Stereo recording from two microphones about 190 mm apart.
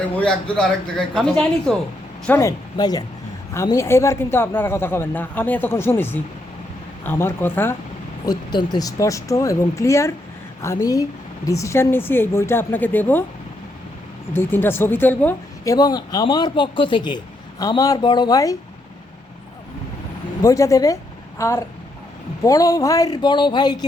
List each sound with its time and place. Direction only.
0.1 s speech: 5° left (ahead or behind)
14.3 s speech: 10° left (ahead or behind)
20.4 s speech: 15° left (ahead or behind)